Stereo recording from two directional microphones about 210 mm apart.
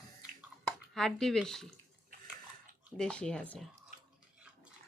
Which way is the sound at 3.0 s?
5° left (ahead or behind).